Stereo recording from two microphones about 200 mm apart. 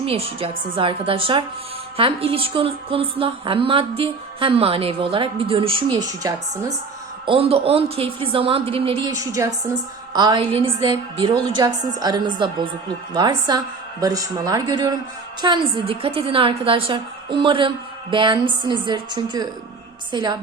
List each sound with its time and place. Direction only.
0.0 s a woman's voice: 30° right (ahead or behind)
7.3 s a woman's voice: 30° right (ahead or behind)
14.0 s a woman's voice: 15° right (ahead or behind)